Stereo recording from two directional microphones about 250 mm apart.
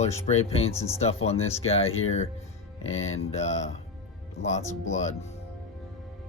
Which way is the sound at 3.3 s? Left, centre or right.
Left.